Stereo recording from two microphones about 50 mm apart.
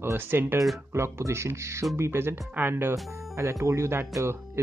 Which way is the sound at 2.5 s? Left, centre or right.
Right.